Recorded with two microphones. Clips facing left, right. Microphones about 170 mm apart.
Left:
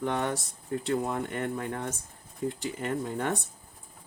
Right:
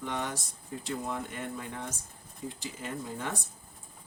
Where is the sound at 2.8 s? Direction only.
70° left (ahead or behind).